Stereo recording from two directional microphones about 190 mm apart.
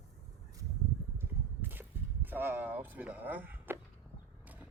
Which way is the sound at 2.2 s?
10° right (ahead or behind).